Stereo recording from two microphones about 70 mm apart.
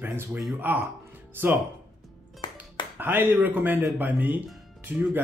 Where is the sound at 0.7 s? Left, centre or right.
Right.